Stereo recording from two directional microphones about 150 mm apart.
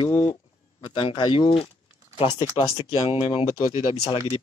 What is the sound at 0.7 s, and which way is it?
Speech, 35° left (ahead or behind).